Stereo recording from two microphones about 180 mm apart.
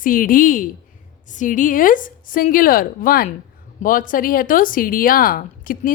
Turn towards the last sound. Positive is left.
turn(degrees=50)  # may be behind; listen again after turning